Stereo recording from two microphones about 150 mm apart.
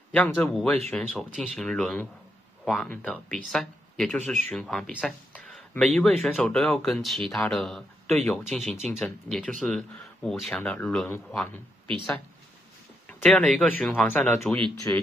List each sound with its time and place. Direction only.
0.1 s speech: 10° left (ahead or behind)
13.2 s speech: 5° left (ahead or behind)